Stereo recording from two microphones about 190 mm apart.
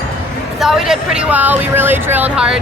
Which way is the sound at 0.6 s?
5° right (ahead or behind).